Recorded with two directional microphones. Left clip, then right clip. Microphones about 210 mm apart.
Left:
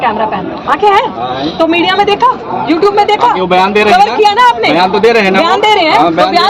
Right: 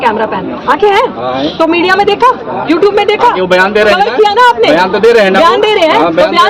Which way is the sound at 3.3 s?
35° right (ahead or behind).